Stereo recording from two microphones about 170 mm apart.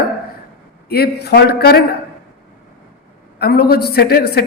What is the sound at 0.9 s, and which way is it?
Speech, 70° left (ahead or behind).